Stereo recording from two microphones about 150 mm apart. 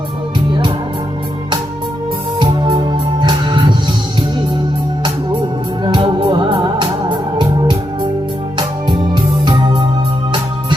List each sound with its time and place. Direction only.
3.2 s music: 30° right (ahead or behind)
5.8 s music: 35° right (ahead or behind)
8.5 s music: 30° right (ahead or behind)